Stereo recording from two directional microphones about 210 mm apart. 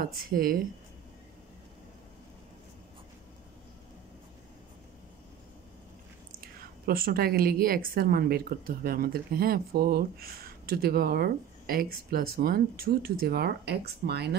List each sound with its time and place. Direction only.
0.2 s a woman's voice: 45° right (ahead or behind)
6.9 s a woman's voice: 45° right (ahead or behind)